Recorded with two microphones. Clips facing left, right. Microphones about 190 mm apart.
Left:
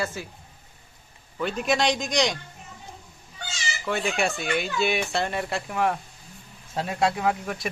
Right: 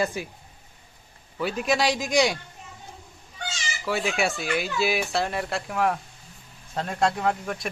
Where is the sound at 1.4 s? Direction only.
5° right (ahead or behind).